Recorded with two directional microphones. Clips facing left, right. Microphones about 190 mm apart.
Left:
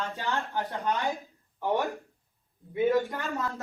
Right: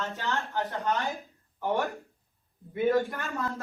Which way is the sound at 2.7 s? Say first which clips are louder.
Even; 15° left (ahead or behind).